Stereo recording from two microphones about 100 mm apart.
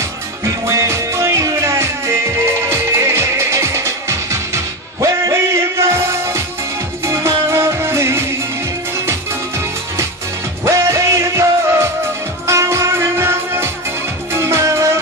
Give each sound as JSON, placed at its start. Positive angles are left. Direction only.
{"t": 0.7, "sound": "music", "side_deg": -30}
{"t": 5.0, "sound": "a sound", "side_deg": -30}
{"t": 7.1, "sound": "music", "side_deg": -30}
{"t": 10.6, "sound": "music", "side_deg": -30}